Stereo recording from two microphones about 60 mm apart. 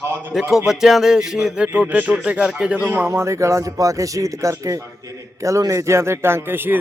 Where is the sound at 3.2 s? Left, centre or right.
Right.